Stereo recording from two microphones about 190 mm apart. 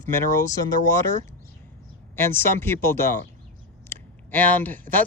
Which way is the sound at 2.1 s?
10° left (ahead or behind).